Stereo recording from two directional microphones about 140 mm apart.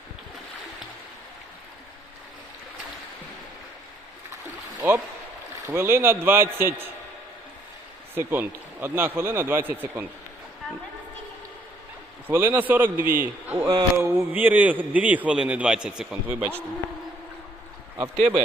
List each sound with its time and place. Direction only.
4.8 s a man's voice: 15° right (ahead or behind)
8.1 s a man's voice: 15° right (ahead or behind)
12.3 s a man's voice: 15° right (ahead or behind)
13.7 s a man's voice: 25° right (ahead or behind)